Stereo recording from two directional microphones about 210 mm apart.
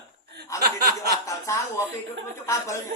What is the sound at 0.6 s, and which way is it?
Speech, 45° right (ahead or behind).